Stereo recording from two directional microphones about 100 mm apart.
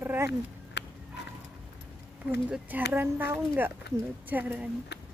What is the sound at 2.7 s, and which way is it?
A woman's voice, 20° right (ahead or behind).